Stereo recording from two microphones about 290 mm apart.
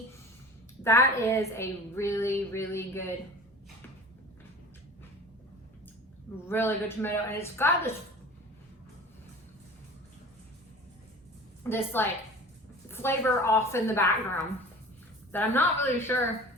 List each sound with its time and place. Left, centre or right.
0.9 s a woman's voice: centre
6.5 s a woman's voice: centre
11.7 s a woman's voice: centre
15.3 s a woman's voice: centre